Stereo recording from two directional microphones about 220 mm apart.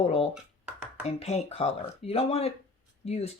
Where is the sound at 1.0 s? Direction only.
30° left (ahead or behind).